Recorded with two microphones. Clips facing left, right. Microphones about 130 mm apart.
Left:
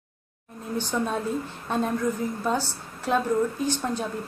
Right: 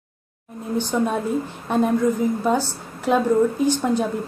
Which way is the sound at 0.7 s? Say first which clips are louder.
Right 5 dB; 15° right (ahead or behind).